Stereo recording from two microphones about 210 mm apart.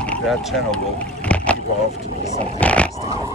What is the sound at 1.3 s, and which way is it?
Vehicle, 5° left (ahead or behind).